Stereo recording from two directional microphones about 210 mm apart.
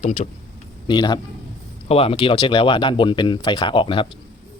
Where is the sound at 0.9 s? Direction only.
20° left (ahead or behind).